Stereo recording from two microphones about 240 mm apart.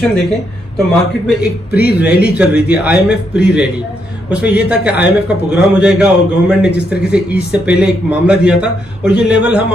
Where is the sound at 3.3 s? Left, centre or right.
Centre.